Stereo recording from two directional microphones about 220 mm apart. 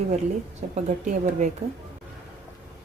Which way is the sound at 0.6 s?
35° right (ahead or behind).